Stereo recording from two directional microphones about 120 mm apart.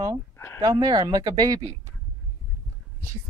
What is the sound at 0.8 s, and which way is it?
Speech, 35° right (ahead or behind).